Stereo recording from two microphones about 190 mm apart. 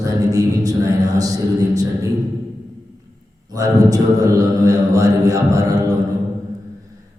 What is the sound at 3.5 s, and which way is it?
A man's voice, 20° right (ahead or behind).